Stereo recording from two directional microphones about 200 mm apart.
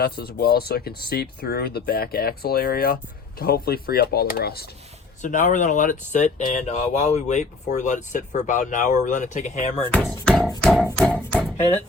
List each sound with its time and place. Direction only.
0.0 s speech: 50° left (ahead or behind)
5.2 s speech: 40° left (ahead or behind)
9.8 s speech: 5° left (ahead or behind)
10.6 s a sound: centre (ahead or behind)
10.8 s music: 5° left (ahead or behind)